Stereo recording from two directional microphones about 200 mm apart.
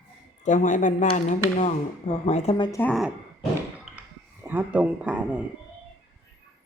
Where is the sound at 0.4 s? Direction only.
40° left (ahead or behind).